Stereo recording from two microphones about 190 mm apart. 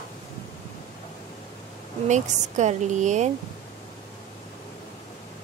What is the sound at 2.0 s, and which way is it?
Speech, 40° right (ahead or behind).